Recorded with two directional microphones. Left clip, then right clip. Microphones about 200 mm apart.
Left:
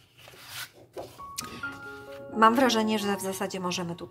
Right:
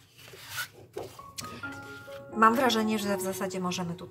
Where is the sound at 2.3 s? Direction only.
40° left (ahead or behind).